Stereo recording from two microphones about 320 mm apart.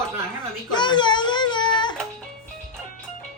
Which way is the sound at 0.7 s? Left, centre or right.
Centre.